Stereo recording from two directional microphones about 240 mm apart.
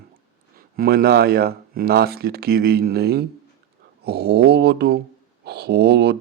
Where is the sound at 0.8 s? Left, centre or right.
Right.